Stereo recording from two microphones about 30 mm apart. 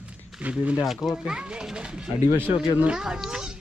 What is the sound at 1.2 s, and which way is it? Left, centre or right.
A child's voice, right.